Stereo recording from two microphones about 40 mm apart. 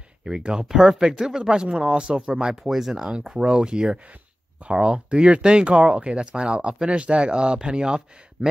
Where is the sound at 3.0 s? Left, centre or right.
Centre.